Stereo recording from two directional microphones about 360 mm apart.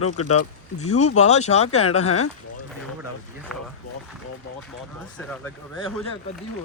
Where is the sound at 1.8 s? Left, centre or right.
Left.